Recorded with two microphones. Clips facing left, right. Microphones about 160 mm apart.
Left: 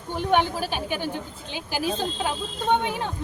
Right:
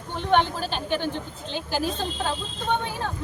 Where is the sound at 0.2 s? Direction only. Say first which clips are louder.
Even; 10° left (ahead or behind).